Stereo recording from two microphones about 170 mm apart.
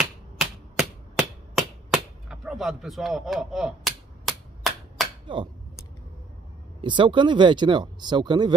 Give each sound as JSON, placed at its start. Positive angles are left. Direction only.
{"t": 0.0, "sound": "hammer", "side_deg": 0}
{"t": 5.2, "sound": "a sound", "side_deg": -30}
{"t": 6.8, "sound": "speech", "side_deg": -30}